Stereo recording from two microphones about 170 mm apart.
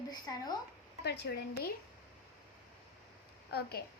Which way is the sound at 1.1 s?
75° left (ahead or behind).